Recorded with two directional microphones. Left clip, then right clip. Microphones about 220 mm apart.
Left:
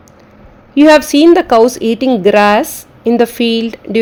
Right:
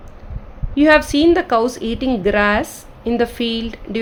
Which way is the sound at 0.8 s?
30° left (ahead or behind).